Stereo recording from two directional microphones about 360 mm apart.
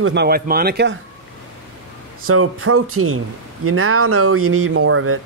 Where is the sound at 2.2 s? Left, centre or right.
Right.